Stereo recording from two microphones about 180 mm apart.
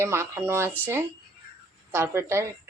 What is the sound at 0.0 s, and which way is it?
Speech, 15° right (ahead or behind).